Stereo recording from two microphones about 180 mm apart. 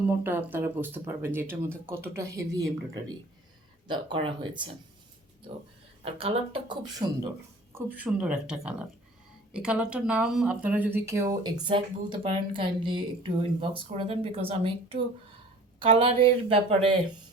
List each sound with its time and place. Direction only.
0.0 s speech: 10° right (ahead or behind); by 4.8 s 25° right (ahead or behind)
6.1 s speech: 30° right (ahead or behind)
7.8 s speech: 10° right (ahead or behind)
11.6 s speech: 25° right (ahead or behind)